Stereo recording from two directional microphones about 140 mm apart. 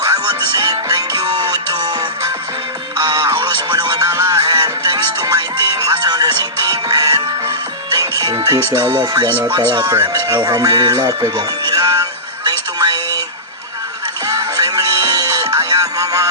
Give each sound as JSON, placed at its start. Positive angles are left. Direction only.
{"t": 0.0, "sound": "music", "side_deg": -25}
{"t": 8.7, "sound": "speech", "side_deg": -20}
{"t": 9.0, "sound": "speech", "side_deg": -30}
{"t": 12.5, "sound": "a sound", "side_deg": -30}
{"t": 14.3, "sound": "music", "side_deg": -25}